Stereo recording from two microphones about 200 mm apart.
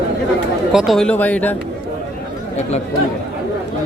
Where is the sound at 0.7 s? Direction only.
Centre (ahead or behind).